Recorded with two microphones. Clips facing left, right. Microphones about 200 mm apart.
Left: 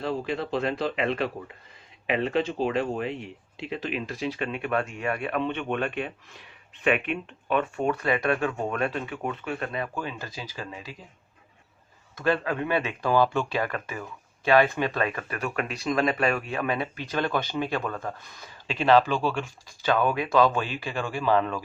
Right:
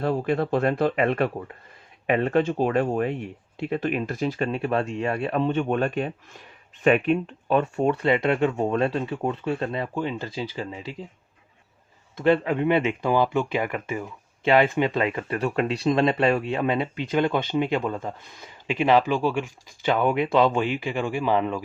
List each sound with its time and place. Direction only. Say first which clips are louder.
0.0 s speech: right 5 dB; 50° right (ahead or behind); by 10.9 s 25° right (ahead or behind)
12.1 s speech: right 5 dB; 20° right (ahead or behind)